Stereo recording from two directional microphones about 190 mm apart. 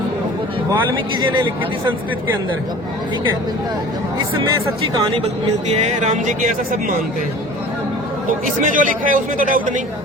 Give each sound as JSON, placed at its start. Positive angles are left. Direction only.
{"t": 1.3, "sound": "speech", "side_deg": -20}
{"t": 5.8, "sound": "speech", "side_deg": -35}
{"t": 8.3, "sound": "speech", "side_deg": -45}